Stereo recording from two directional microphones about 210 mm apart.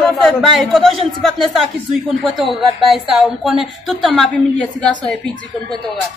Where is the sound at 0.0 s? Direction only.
Centre (ahead or behind).